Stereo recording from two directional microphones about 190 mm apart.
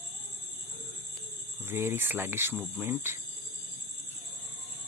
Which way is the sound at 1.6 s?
10° right (ahead or behind).